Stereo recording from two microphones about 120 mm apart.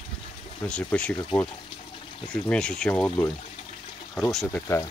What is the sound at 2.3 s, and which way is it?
Speech, 5° left (ahead or behind).